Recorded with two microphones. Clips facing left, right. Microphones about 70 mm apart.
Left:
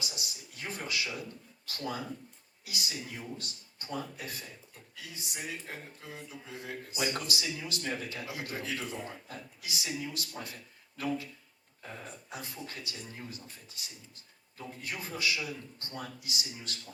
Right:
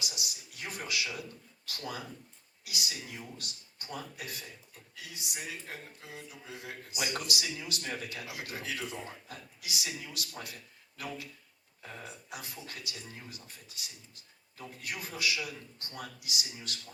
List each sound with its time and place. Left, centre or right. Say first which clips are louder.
0.0 s speech: even; left
12.3 s speech: left 3 dB; left